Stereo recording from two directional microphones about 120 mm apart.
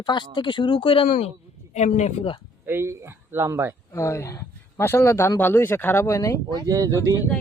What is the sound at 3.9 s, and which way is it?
Speech, 25° left (ahead or behind).